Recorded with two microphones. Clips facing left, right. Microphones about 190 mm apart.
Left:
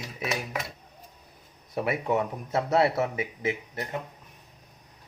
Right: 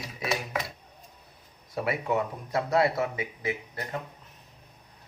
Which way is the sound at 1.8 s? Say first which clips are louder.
Left 1 dB; 25° left (ahead or behind).